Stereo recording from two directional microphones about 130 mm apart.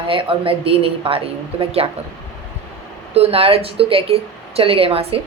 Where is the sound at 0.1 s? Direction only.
45° right (ahead or behind).